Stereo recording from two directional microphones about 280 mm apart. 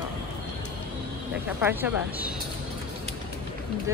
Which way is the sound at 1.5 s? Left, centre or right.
Centre.